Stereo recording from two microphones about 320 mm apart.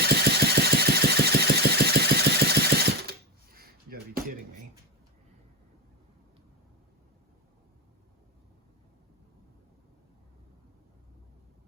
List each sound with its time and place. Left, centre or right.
0.0 s engine: right